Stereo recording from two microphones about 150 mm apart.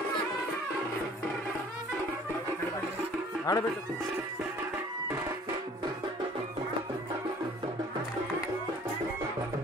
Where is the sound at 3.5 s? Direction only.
25° left (ahead or behind).